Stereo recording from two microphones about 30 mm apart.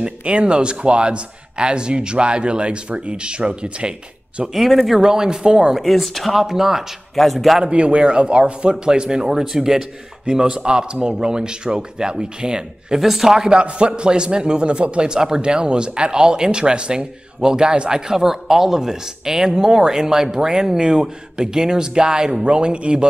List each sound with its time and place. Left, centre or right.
0.2 s speech: right
4.6 s speech: centre
5.0 s speech: right
5.8 s speech: centre
6.4 s speech: centre
7.2 s speech: centre
7.6 s a man's voice: right
8.1 s speech: right
9.2 s speech: centre
10.3 s speech: right
13.0 s speech: centre
13.6 s speech: right